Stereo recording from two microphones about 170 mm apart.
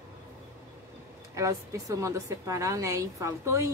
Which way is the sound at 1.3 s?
20° right (ahead or behind).